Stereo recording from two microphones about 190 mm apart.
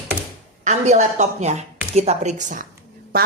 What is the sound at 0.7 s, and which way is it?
Speech, 40° right (ahead or behind).